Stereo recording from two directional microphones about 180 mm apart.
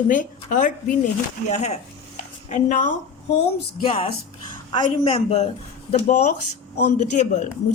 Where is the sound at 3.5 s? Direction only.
30° left (ahead or behind).